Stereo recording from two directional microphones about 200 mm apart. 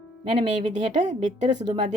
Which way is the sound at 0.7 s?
35° right (ahead or behind).